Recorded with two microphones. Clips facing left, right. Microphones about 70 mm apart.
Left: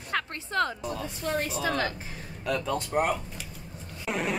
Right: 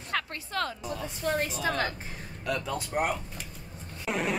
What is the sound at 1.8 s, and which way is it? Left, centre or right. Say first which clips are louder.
Speech: left 1 dB; right.